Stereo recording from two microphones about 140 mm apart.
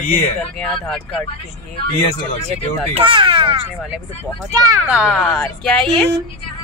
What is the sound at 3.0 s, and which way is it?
Speech, 35° right (ahead or behind).